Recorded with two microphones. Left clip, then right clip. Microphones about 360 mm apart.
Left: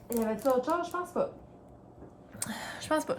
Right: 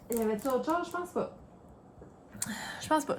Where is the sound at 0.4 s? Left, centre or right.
Centre.